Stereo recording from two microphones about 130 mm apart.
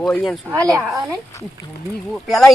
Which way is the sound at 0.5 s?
25° right (ahead or behind).